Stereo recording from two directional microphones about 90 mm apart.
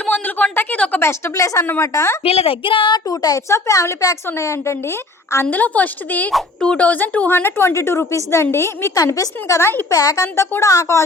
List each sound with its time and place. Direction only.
0.0 s a woman's voice: 20° left (ahead or behind)
2.2 s a sound: 90° left; by 3.0 s 65° left (ahead or behind)
3.1 s a woman's voice: 45° left (ahead or behind)
5.5 s a woman's voice: 20° left (ahead or behind)
9.0 s a woman's voice: 40° left (ahead or behind)